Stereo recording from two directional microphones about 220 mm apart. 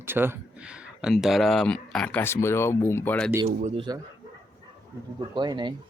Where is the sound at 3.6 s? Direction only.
25° right (ahead or behind).